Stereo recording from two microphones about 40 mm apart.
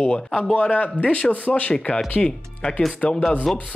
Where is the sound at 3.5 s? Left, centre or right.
Centre.